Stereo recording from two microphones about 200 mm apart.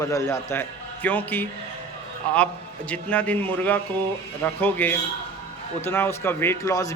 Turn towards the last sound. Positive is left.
turn(degrees=15)  # may be behind; listen again after turning